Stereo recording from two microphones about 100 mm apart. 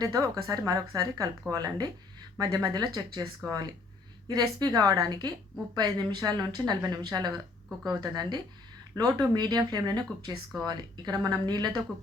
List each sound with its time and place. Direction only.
0.0 s a woman's voice: 35° right (ahead or behind)